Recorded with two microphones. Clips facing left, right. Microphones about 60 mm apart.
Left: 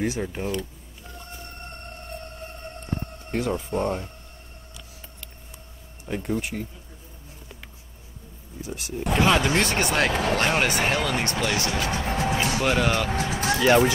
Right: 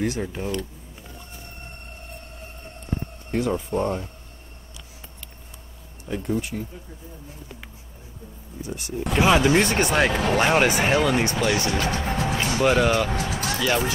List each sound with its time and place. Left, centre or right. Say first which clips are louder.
0.3 s speech: even; centre
3.3 s speech: right 2 dB; centre
6.0 s speech: right 1 dB; centre
8.6 s speech: right 2 dB; centre
9.1 s speech: right 3 dB; centre
13.1 s speech: left 2 dB; left